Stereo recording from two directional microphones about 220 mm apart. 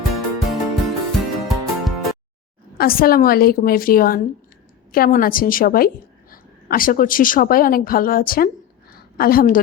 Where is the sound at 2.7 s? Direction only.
40° left (ahead or behind).